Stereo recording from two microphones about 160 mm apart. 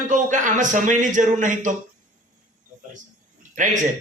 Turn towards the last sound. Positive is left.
turn(degrees=-50)  # may be behind; listen again after turning